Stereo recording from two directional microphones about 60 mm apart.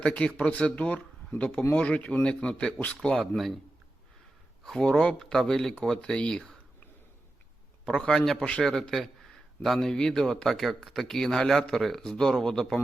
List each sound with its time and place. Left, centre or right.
0.0 s speech: left
3.3 s a man's voice: centre
4.8 s speech: centre
7.9 s a man's voice: centre
10.5 s a man's voice: centre